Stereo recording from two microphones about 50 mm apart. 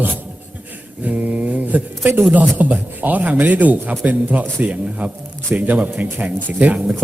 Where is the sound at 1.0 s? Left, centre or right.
Right.